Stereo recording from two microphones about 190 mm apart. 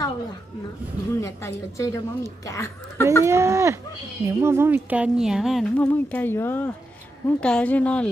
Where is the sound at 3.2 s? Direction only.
15° right (ahead or behind).